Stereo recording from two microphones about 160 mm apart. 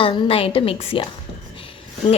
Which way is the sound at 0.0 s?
35° left (ahead or behind).